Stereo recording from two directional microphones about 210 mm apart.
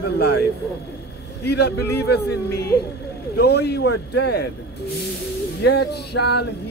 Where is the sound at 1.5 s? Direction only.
50° left (ahead or behind).